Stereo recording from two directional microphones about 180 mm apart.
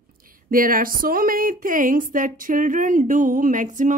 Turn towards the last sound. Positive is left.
turn(degrees=-45)  # may be behind; listen again after turning